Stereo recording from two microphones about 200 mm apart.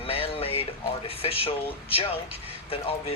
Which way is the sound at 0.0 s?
30° left (ahead or behind).